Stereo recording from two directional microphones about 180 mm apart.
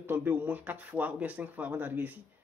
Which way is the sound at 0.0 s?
10° right (ahead or behind).